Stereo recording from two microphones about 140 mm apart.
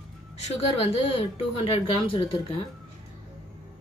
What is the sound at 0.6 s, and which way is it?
A woman's voice, 45° left (ahead or behind).